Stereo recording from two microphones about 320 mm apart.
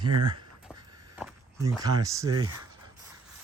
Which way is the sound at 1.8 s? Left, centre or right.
Centre.